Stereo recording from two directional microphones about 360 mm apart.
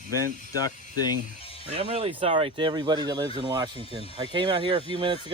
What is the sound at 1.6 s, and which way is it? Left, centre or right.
Speech, centre.